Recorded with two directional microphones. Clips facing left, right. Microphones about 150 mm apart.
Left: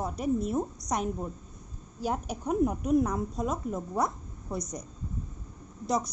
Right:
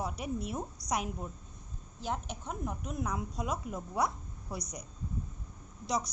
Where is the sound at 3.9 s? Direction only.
Centre (ahead or behind).